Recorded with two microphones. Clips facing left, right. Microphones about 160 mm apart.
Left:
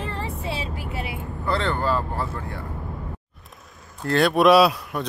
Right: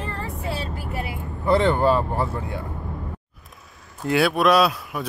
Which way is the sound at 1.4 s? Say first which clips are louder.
Right 6 dB; 15° right (ahead or behind).